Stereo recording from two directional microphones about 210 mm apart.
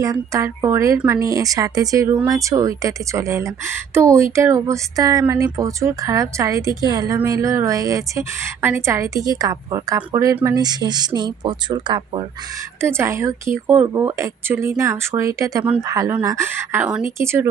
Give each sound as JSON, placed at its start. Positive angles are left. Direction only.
{"t": 0.0, "sound": "speech", "side_deg": -15}